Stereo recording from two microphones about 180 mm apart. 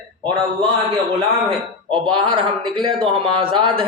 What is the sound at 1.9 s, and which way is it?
A man's voice, 25° right (ahead or behind).